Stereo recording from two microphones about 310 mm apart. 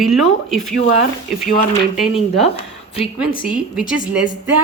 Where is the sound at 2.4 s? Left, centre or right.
Centre.